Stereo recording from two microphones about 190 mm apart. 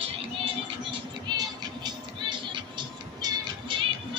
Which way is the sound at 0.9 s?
25° right (ahead or behind).